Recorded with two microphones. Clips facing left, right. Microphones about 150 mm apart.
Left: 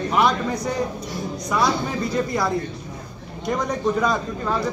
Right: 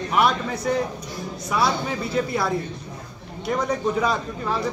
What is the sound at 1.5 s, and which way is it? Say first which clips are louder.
A man's voice: left 1 dB; 5° right (ahead or behind).